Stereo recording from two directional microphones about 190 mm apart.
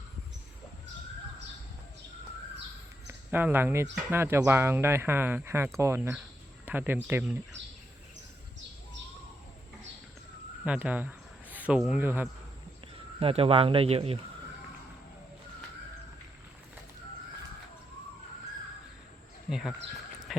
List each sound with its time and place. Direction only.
3.1 s speech: 10° right (ahead or behind)
10.6 s speech: 5° right (ahead or behind)
13.1 s speech: 30° right (ahead or behind)
19.5 s speech: centre (ahead or behind)